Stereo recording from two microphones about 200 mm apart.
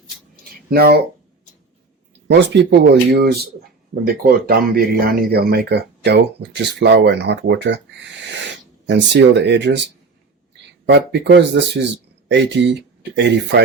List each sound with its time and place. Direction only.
0.7 s speech: 50° right (ahead or behind)
2.3 s speech: 60° right (ahead or behind)
8.9 s speech: 60° right (ahead or behind)
10.8 s speech: 60° right (ahead or behind)